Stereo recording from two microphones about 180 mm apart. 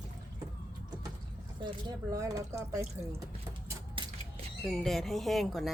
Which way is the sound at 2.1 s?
20° right (ahead or behind).